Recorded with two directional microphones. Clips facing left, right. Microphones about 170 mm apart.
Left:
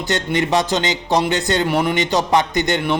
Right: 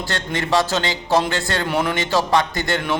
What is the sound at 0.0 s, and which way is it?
A man's voice, 20° left (ahead or behind).